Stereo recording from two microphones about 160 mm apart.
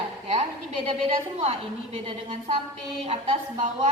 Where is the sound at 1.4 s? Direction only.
40° right (ahead or behind).